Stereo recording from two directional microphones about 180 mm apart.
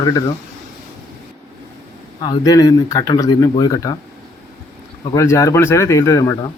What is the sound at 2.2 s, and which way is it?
Speech, 25° left (ahead or behind).